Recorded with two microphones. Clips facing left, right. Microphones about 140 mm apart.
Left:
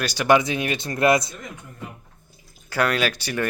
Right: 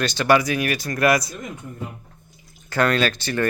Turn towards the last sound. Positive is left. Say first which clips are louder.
# right 2 dB
turn(degrees=10)  # may be behind; listen again after turning